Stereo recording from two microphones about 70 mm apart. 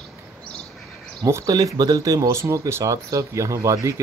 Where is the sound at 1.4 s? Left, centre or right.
Right.